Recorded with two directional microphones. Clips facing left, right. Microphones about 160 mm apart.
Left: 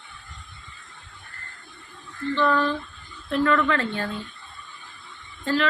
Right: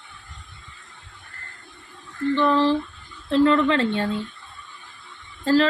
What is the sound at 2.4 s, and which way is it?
A woman's voice, 25° right (ahead or behind).